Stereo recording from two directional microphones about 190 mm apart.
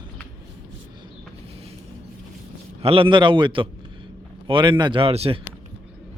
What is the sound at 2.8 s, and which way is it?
A man's voice, 30° right (ahead or behind).